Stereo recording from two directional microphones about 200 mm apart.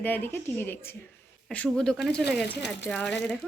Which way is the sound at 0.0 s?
10° left (ahead or behind).